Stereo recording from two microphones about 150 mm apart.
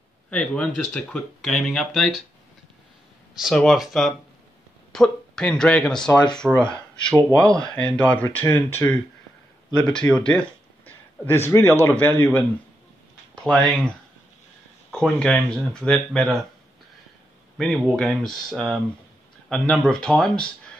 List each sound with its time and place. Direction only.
0.3 s speech: 5° left (ahead or behind)
3.3 s speech: centre (ahead or behind)
13.3 s a sound: 5° left (ahead or behind)
14.9 s speech: 5° left (ahead or behind)
17.6 s speech: centre (ahead or behind)